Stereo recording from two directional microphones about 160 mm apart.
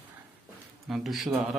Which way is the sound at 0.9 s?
Centre (ahead or behind).